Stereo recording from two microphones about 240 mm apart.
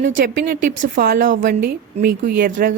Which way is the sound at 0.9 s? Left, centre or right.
Right.